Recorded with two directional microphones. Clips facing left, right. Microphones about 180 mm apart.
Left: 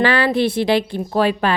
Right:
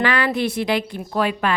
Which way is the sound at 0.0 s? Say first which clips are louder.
Left 4 dB; 30° left (ahead or behind).